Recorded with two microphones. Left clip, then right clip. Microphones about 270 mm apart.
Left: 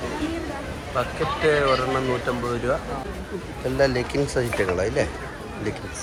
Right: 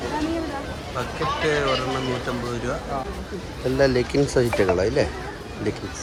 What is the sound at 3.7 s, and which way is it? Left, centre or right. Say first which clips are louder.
Speech: right 2 dB; centre.